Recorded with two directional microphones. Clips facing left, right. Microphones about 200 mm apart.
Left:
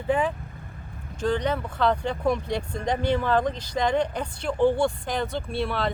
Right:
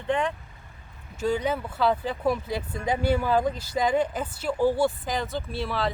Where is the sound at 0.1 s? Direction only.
5° left (ahead or behind).